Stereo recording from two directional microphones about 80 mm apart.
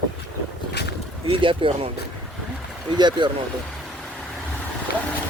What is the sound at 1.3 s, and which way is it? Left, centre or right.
Speech, right.